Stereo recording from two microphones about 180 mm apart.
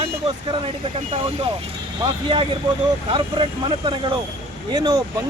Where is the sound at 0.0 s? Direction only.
30° right (ahead or behind).